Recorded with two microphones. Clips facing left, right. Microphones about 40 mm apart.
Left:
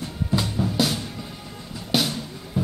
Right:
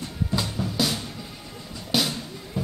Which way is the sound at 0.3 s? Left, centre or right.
Centre.